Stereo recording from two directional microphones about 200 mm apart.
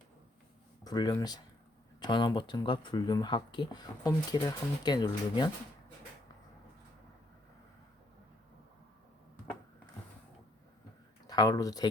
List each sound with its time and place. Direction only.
0.9 s speech: 20° left (ahead or behind)
11.3 s speech: 20° left (ahead or behind)